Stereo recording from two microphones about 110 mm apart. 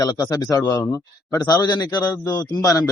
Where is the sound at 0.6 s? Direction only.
25° left (ahead or behind).